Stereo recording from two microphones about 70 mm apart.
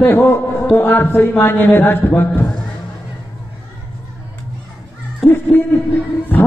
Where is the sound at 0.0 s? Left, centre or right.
Left.